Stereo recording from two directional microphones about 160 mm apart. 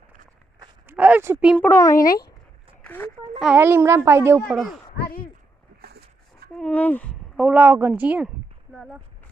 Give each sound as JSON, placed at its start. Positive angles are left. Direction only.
{"t": 0.9, "sound": "speech", "side_deg": -10}
{"t": 1.5, "sound": "speech", "side_deg": 15}
{"t": 2.8, "sound": "a sound", "side_deg": 10}
{"t": 3.3, "sound": "a child's voice", "side_deg": -5}
{"t": 3.6, "sound": "a woman's voice", "side_deg": -15}
{"t": 4.4, "sound": "a child's voice", "side_deg": 0}
{"t": 5.8, "sound": "a sound", "side_deg": -80}
{"t": 6.6, "sound": "speech", "side_deg": 10}
{"t": 7.3, "sound": "a woman's voice", "side_deg": -10}